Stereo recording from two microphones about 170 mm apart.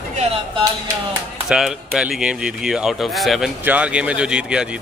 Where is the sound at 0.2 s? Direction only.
35° right (ahead or behind).